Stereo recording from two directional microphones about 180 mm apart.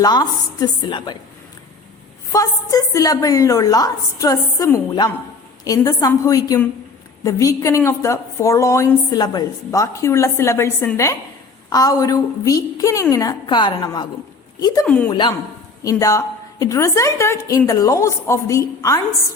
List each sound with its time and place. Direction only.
0.0 s a woman's voice: 20° left (ahead or behind)
2.3 s a woman's voice: 20° left (ahead or behind)
14.8 s a woman's voice: 5° left (ahead or behind)
15.1 s a woman's voice: 25° left (ahead or behind)